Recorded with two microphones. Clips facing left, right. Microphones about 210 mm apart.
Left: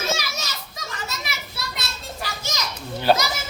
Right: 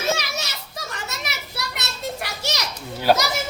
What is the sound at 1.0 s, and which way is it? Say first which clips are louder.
Children playing: even; 70° right (ahead or behind).